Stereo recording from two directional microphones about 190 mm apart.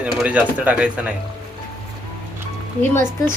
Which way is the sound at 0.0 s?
5° right (ahead or behind).